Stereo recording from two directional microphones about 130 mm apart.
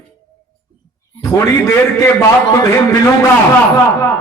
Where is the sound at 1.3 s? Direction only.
25° left (ahead or behind).